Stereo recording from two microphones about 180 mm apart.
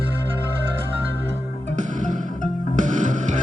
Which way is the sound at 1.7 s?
45° right (ahead or behind).